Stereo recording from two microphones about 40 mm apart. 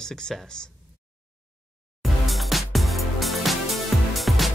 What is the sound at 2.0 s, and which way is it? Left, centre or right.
Music, centre.